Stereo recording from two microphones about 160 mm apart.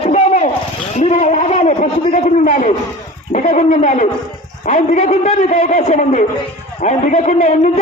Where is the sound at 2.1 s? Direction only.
60° left (ahead or behind).